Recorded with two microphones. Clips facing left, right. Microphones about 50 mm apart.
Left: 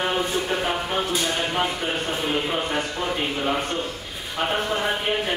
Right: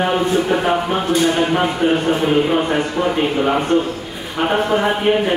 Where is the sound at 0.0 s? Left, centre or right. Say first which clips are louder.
Right 7 dB; centre.